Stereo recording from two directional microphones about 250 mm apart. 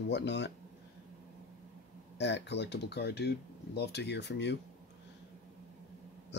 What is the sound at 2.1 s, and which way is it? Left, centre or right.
Speech, left.